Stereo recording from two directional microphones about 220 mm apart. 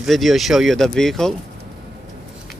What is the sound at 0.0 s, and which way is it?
Speech, centre (ahead or behind).